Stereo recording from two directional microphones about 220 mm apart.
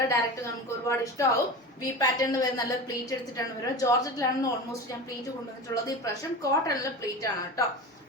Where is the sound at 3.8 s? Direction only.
15° left (ahead or behind).